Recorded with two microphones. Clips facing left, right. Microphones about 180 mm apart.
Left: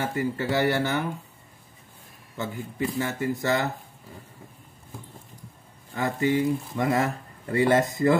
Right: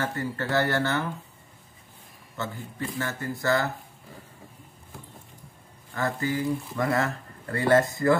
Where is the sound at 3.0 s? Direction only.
15° left (ahead or behind).